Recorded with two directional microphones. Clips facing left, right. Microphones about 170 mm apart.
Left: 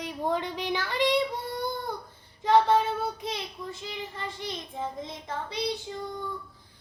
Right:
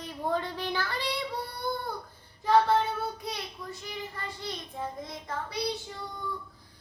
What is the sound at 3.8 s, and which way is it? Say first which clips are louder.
Child singing: left 1 dB; 20° left (ahead or behind).